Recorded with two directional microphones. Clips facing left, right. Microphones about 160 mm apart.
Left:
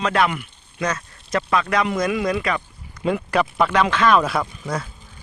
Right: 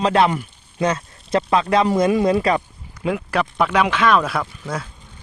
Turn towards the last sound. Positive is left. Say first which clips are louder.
# left 1 dB
turn(degrees=0)  # may be behind; listen again after turning